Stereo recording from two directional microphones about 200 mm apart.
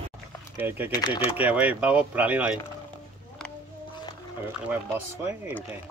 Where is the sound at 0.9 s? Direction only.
20° left (ahead or behind).